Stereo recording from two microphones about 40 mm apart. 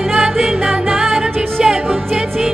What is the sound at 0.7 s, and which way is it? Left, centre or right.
Music, centre.